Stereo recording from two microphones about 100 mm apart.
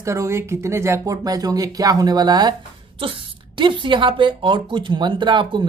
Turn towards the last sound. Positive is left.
turn(degrees=-50)  # may be behind; listen again after turning